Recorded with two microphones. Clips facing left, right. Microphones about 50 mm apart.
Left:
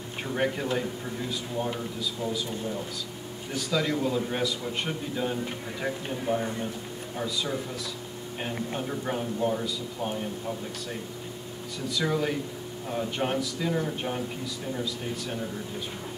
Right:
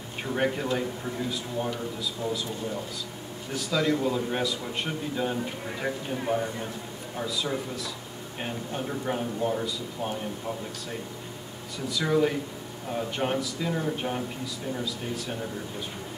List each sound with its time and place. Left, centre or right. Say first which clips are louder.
0.3 s a man's voice: right 1 dB; centre
2.2 s a man's voice: right 1 dB; centre
6.3 s a man's voice: even; right
7.2 s a man's voice: right 1 dB; centre
11.9 s a man's voice: right 3 dB; centre